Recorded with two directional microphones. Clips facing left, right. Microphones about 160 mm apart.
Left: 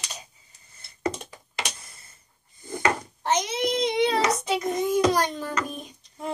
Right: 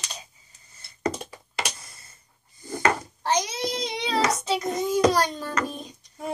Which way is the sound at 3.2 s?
20° left (ahead or behind).